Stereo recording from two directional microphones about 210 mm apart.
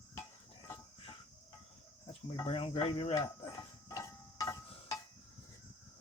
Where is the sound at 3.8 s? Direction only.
15° left (ahead or behind).